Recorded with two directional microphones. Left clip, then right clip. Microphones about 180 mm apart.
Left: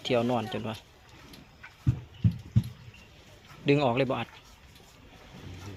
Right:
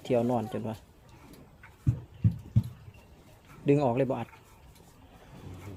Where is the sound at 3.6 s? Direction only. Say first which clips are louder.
Left 1 dB; 20° right (ahead or behind).